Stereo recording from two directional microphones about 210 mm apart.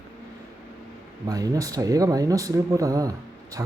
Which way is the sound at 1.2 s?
15° right (ahead or behind).